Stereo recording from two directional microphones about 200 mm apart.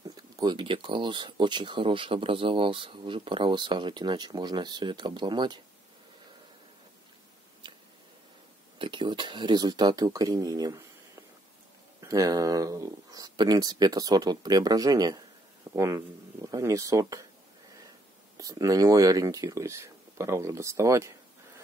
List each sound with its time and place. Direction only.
0.4 s speech: 20° right (ahead or behind)
8.7 s speech: 25° right (ahead or behind)
18.4 s speech: 15° right (ahead or behind)